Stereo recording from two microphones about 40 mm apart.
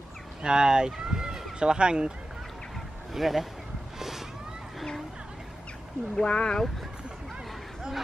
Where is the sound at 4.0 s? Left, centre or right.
Centre.